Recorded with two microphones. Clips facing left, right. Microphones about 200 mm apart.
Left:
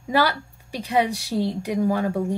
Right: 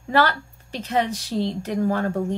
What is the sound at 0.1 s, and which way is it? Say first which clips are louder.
Speech: right 1 dB; 10° left (ahead or behind).